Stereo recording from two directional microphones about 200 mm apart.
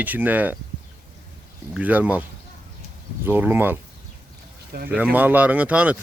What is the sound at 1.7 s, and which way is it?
Speech, 10° right (ahead or behind).